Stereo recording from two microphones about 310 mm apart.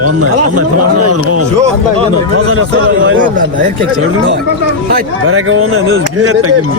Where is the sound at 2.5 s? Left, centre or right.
Right.